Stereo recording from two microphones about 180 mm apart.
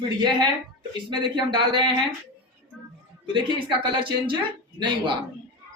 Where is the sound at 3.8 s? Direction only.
30° right (ahead or behind).